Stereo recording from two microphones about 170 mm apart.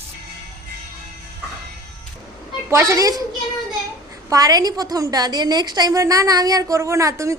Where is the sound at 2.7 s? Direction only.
15° right (ahead or behind).